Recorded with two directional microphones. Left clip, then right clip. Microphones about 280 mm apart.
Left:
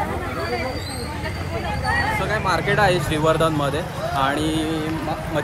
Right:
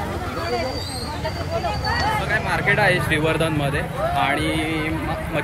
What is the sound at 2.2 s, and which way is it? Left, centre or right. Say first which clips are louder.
Speech: even; centre.